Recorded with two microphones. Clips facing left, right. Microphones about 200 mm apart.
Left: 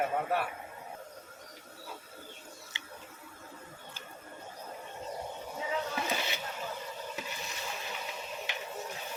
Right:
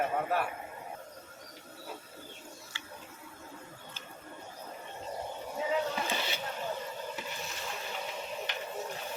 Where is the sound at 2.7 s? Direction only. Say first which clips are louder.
Right 1 dB; 20° left (ahead or behind).